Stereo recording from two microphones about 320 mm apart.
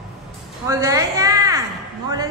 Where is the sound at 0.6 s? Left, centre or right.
Centre.